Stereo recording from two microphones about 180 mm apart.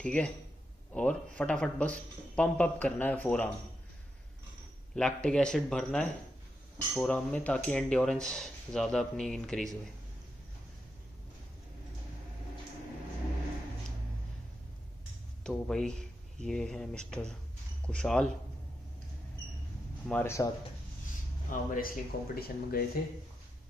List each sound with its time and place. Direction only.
0.0 s speech: 5° left (ahead or behind)
4.9 s speech: 5° left (ahead or behind)
15.4 s speech: 5° left (ahead or behind)
20.1 s speech: 10° left (ahead or behind)
21.5 s speech: 50° left (ahead or behind)